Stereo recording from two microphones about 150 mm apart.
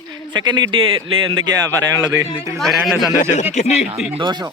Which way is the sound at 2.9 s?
25° left (ahead or behind).